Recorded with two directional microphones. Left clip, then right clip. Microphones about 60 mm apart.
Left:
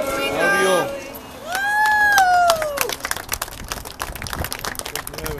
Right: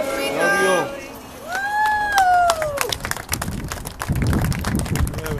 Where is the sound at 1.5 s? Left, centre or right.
Left.